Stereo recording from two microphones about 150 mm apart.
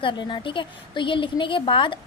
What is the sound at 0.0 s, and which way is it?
A woman's voice, 35° left (ahead or behind).